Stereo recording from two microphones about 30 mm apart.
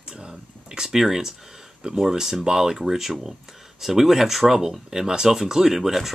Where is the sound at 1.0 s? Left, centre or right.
Centre.